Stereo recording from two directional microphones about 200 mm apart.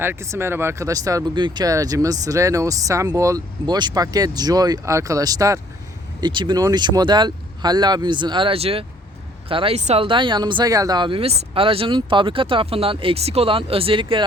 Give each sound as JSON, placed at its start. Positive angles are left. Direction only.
{"t": 0.0, "sound": "speech", "side_deg": -10}